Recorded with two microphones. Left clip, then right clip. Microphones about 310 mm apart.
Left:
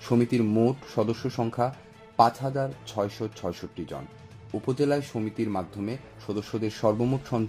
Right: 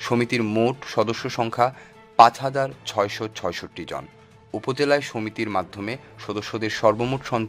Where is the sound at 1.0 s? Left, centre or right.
Right.